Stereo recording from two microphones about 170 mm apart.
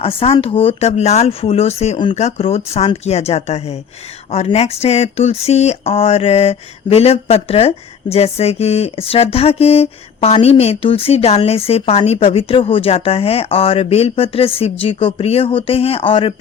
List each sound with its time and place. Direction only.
0.0 s speech: 35° left (ahead or behind)